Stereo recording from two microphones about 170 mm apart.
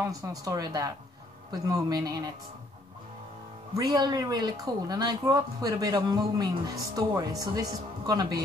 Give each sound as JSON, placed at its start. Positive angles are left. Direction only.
{"t": 0.0, "sound": "speech", "side_deg": -20}
{"t": 3.7, "sound": "speech", "side_deg": -25}